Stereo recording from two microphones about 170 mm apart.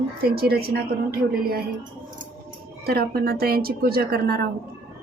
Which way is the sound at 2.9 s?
65° right (ahead or behind).